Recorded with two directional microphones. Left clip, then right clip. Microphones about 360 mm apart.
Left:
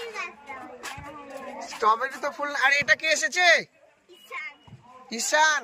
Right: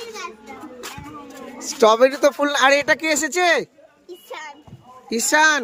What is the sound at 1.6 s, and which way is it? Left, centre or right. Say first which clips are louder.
Speech: right 9 dB; centre.